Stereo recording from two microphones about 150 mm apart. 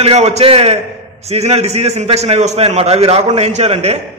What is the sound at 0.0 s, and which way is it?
A man's voice, 45° right (ahead or behind).